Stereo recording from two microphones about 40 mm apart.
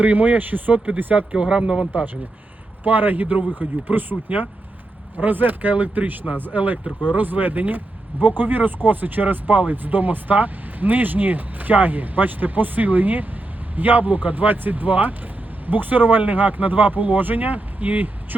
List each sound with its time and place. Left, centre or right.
0.0 s speech: right
1.3 s speech: right
2.8 s speech: right